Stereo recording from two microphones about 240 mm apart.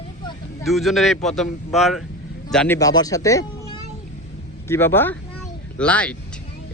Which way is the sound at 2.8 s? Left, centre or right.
Centre.